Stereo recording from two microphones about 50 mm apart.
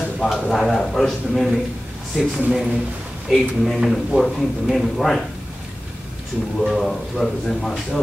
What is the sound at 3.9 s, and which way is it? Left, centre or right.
A man's voice, centre.